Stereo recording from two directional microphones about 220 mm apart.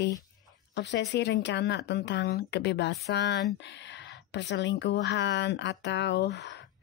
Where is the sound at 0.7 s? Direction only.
50° left (ahead or behind).